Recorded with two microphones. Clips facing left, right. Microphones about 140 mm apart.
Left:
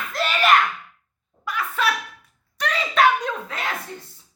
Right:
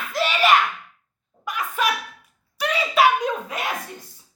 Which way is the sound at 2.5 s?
5° right (ahead or behind).